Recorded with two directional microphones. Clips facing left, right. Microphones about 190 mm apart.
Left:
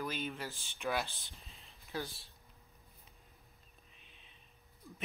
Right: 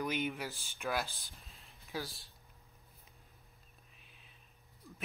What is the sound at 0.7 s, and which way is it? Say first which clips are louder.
Speech: left 1 dB; centre (ahead or behind).